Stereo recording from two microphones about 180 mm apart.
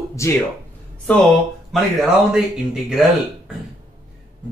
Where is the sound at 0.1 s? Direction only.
15° left (ahead or behind).